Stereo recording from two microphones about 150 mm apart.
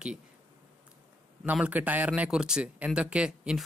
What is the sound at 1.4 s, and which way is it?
Speech, 10° right (ahead or behind).